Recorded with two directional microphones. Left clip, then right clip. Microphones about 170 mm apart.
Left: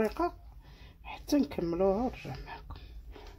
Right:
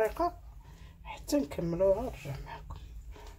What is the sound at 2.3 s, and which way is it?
Dog, 45° left (ahead or behind).